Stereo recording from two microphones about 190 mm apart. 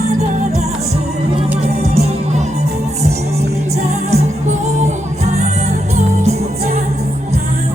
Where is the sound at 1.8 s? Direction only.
35° right (ahead or behind).